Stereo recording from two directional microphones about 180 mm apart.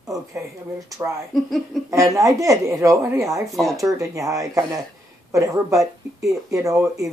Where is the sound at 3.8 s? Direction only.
20° right (ahead or behind).